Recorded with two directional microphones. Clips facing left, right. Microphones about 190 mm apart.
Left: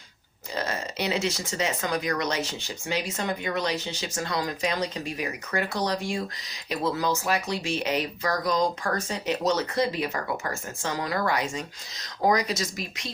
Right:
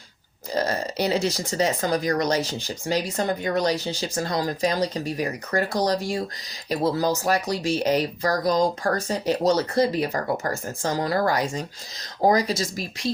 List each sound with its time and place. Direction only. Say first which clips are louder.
0.5 s speech: right 6 dB; 35° right (ahead or behind)